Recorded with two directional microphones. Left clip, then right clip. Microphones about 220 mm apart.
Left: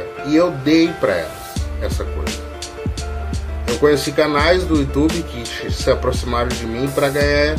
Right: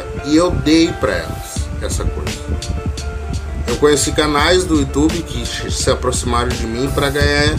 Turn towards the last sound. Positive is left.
turn(degrees=-10)  # may be behind; listen again after turning